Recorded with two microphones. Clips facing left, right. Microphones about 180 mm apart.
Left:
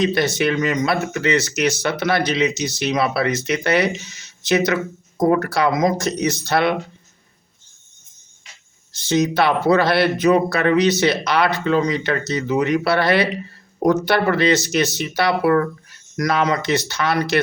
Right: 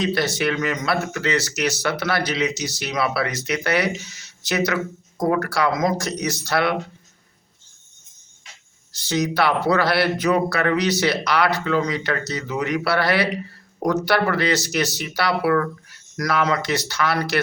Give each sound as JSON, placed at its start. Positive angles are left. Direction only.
{"t": 0.0, "sound": "speech", "side_deg": 20}
{"t": 8.9, "sound": "speech", "side_deg": 25}